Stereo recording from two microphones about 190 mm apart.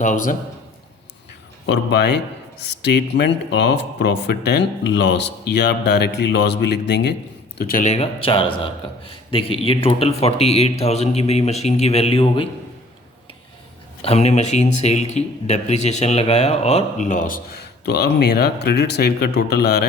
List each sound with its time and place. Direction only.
0.0 s a man's voice: 40° left (ahead or behind)
1.6 s speech: 65° left (ahead or behind)
7.6 s a man's voice: 45° left (ahead or behind); by 12.5 s 30° left (ahead or behind)
14.0 s a man's voice: 35° left (ahead or behind)
17.8 s speech: 60° left (ahead or behind)